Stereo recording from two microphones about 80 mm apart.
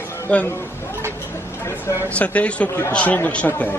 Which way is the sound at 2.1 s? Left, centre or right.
Centre.